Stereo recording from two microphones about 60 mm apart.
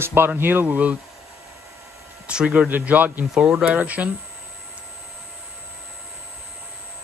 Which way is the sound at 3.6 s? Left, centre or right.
Right.